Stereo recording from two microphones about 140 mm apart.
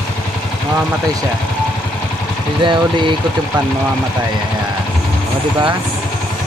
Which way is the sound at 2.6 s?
35° right (ahead or behind).